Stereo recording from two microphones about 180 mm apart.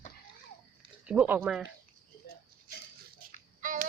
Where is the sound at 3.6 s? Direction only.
45° right (ahead or behind).